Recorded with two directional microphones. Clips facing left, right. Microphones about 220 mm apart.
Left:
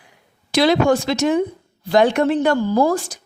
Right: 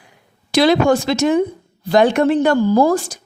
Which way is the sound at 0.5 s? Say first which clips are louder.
Right 2 dB; 45° right (ahead or behind).